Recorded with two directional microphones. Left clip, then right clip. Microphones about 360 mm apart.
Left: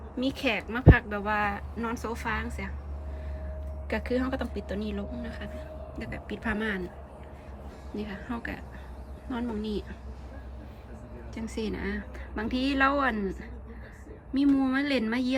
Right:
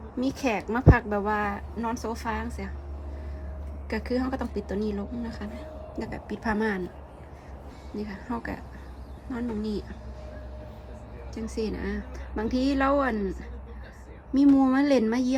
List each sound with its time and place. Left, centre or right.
0.3 s speech: centre
0.8 s speech: left
1.1 s speech: centre
3.8 s speech: centre
7.9 s speech: centre
11.3 s speech: centre
14.3 s speech: centre